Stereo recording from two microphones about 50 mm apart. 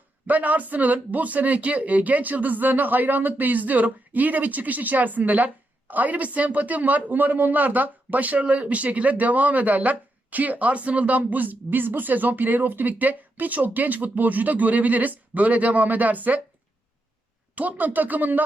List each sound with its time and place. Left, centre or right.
0.3 s speech: right
17.5 s speech: right